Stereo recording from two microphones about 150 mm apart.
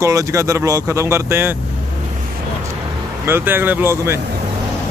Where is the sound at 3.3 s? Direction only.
15° right (ahead or behind).